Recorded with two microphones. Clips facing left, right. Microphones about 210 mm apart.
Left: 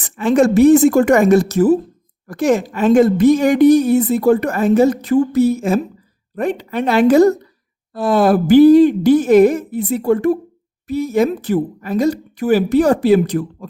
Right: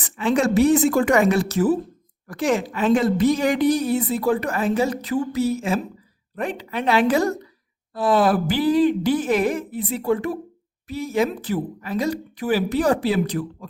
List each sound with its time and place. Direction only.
0.0 s a woman's voice: 45° left (ahead or behind)